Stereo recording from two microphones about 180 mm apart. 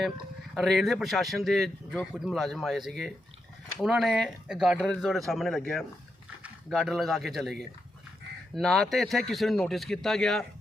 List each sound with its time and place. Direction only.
0.5 s speech: centre (ahead or behind)